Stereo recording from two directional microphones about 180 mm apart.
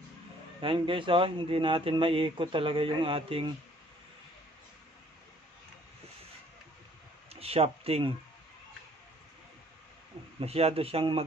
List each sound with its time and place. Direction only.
0.6 s speech: 30° right (ahead or behind)
7.3 s speech: 35° right (ahead or behind)
10.4 s speech: 35° right (ahead or behind)